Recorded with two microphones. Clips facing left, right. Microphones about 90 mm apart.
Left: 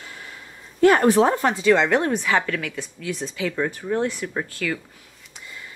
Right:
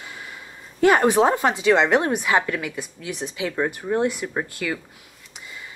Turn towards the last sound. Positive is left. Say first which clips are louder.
# even
turn(degrees=-10)  # may be behind; listen again after turning